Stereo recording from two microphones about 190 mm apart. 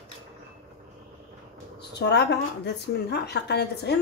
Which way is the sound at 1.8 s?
60° left (ahead or behind).